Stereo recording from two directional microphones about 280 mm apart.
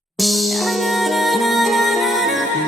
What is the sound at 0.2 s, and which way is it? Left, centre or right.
Music, centre.